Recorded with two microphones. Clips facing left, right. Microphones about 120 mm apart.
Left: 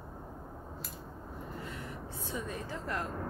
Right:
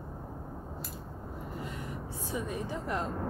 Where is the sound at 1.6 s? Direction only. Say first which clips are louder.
Right 4 dB; 15° right (ahead or behind).